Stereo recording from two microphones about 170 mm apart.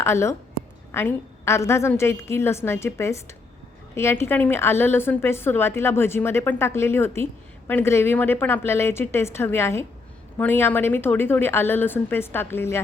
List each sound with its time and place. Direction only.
0.0 s a woman's voice: 15° left (ahead or behind)